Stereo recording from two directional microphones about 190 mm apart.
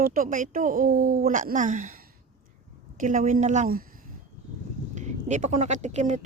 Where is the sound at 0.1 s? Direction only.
45° right (ahead or behind).